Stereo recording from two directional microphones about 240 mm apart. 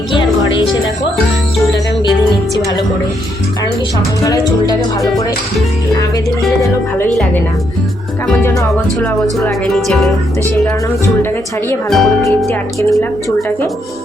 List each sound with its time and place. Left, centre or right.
0.1 s music: left
0.7 s music: centre
4.2 s music: centre
5.0 s speech: centre
8.3 s music: centre
9.4 s speech: centre
11.7 s speech: centre
12.9 s music: centre